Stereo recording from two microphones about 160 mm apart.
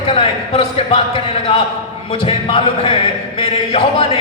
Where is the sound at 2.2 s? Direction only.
35° left (ahead or behind).